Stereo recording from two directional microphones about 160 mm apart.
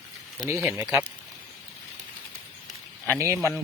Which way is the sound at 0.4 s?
15° right (ahead or behind).